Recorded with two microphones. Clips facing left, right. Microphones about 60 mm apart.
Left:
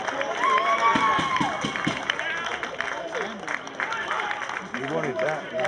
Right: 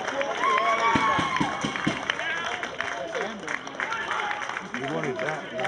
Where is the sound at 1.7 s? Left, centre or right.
Centre.